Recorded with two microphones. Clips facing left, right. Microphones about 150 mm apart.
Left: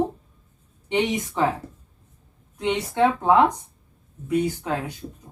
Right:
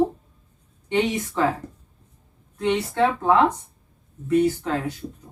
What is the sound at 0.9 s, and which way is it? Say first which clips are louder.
Speech: right 1 dB; 15° left (ahead or behind).